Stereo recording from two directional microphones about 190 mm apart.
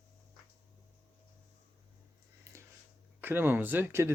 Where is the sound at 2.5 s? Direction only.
15° right (ahead or behind).